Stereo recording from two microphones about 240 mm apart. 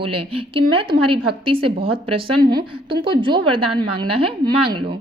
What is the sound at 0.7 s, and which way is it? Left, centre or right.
A woman's voice, right.